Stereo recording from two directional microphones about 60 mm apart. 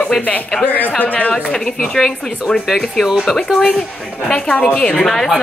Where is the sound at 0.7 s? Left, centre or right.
Left.